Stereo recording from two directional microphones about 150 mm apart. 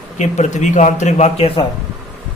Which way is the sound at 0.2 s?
55° left (ahead or behind).